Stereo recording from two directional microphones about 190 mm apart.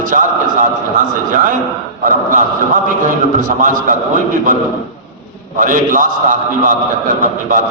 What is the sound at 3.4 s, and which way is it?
Speech, 45° right (ahead or behind).